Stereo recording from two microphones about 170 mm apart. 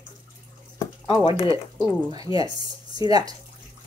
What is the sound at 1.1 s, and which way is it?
Speech, 30° left (ahead or behind).